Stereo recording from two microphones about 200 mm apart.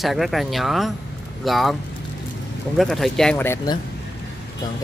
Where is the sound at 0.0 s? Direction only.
Centre (ahead or behind).